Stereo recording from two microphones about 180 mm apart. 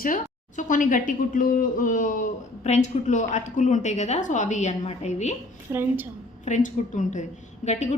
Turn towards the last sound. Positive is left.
turn(degrees=40)  # may be behind; listen again after turning